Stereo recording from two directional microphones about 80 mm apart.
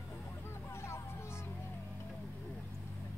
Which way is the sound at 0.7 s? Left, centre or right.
Left.